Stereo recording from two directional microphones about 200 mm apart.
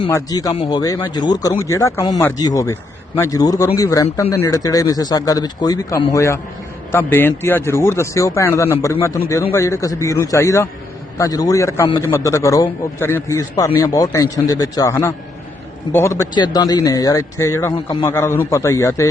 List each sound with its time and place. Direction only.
0.0 s a man's voice: 20° left (ahead or behind)